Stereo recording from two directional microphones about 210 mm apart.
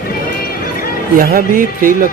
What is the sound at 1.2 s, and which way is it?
Speech, 45° right (ahead or behind).